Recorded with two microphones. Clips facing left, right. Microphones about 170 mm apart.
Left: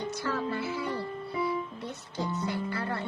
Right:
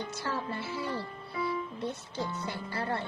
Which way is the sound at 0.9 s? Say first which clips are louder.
Left 4 dB; 25° left (ahead or behind).